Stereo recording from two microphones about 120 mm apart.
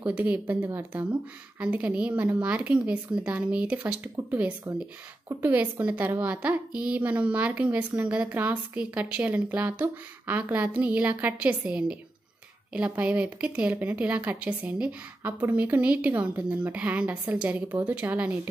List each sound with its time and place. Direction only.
0.0 s a woman's voice: 10° right (ahead or behind)